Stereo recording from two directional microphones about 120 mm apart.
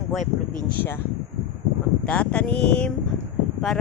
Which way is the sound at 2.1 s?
10° left (ahead or behind).